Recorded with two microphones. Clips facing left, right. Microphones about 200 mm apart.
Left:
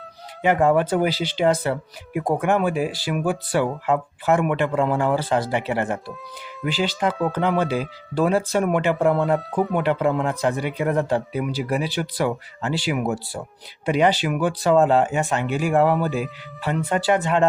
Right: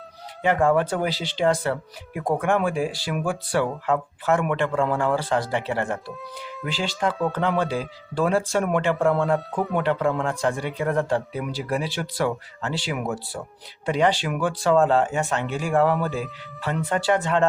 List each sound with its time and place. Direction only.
0.4 s speech: 5° left (ahead or behind)
1.5 s speech: 15° left (ahead or behind)
2.1 s speech: 5° left (ahead or behind)